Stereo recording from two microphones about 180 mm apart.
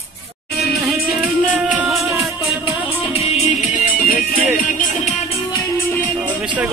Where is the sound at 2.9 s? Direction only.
35° left (ahead or behind).